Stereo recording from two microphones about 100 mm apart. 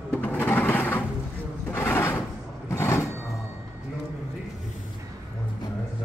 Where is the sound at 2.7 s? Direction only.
30° left (ahead or behind).